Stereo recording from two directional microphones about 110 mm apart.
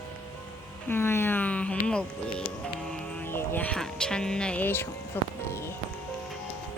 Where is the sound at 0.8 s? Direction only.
20° left (ahead or behind).